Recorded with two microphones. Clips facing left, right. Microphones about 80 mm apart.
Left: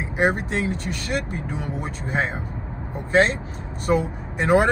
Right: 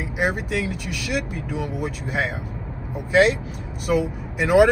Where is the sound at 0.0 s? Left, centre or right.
Left.